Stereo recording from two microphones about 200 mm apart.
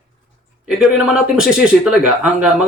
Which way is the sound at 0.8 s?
Centre (ahead or behind).